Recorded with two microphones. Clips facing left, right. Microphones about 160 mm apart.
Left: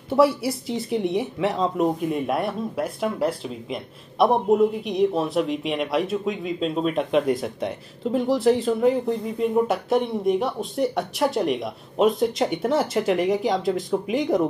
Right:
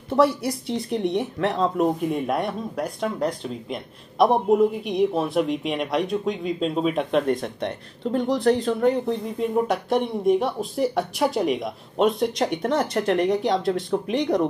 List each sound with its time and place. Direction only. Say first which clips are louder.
0.1 s speech: left 1 dB; 5° left (ahead or behind)